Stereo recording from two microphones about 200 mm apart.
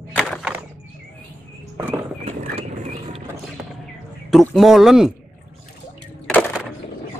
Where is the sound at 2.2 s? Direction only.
35° right (ahead or behind).